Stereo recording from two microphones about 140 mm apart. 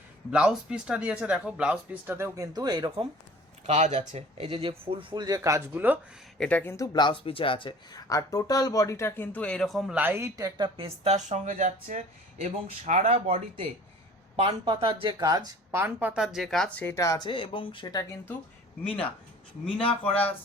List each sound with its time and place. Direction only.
0.3 s speech: 5° right (ahead or behind); by 3.1 s 35° right (ahead or behind)
3.7 s speech: 50° right (ahead or behind); by 6.0 s 15° right (ahead or behind)
6.4 s speech: 10° left (ahead or behind); by 7.7 s 40° left (ahead or behind)
7.9 s speech: 25° left (ahead or behind); by 9.9 s centre (ahead or behind)
9.9 s speech: 15° right (ahead or behind)
10.8 s speech: 45° right (ahead or behind)
14.3 s speech: 35° right (ahead or behind)
15.7 s speech: 15° right (ahead or behind); by 18.2 s 30° left (ahead or behind)
19.9 s speech: 10° left (ahead or behind)